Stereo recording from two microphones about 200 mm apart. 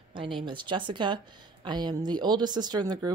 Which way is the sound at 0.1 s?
25° right (ahead or behind).